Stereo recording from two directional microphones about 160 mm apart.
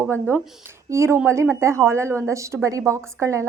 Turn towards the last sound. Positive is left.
turn(degrees=-20)  # may be behind; listen again after turning